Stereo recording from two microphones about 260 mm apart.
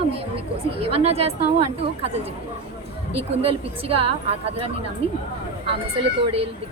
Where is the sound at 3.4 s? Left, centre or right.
Right.